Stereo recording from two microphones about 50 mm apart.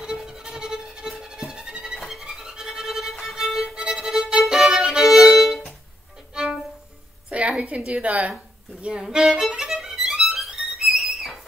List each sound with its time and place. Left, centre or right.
0.0 s music: centre
3.9 s violin: centre
7.2 s a woman's voice: right
8.8 s violin: centre